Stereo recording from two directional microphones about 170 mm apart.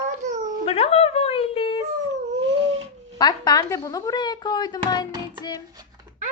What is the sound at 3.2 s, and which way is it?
Speech, 25° left (ahead or behind).